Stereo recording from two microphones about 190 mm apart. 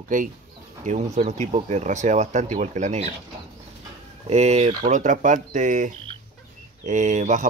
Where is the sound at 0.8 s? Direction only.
40° right (ahead or behind).